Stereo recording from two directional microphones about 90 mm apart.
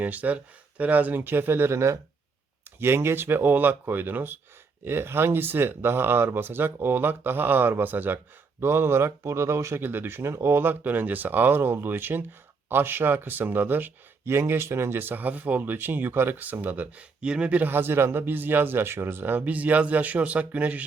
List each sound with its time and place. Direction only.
0.0 s speech: 15° right (ahead or behind)